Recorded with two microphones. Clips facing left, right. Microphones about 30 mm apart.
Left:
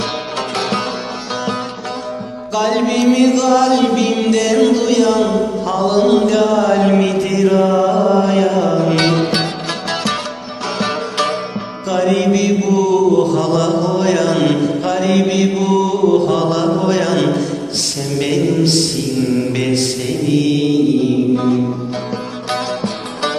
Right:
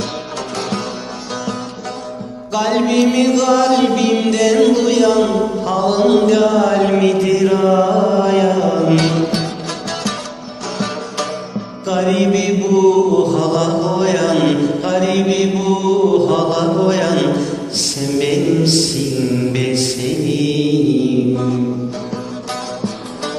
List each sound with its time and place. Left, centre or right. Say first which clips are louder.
0.5 s music: left 3 dB; left
2.5 s music: even; centre
9.0 s music: left 1 dB; left
9.9 s music: left 5 dB; left
11.2 s music: left 4 dB; left
11.9 s music: even; centre
21.3 s music: left 2 dB; left